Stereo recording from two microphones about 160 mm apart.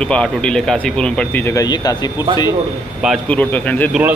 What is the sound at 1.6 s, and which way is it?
Speech, 25° left (ahead or behind).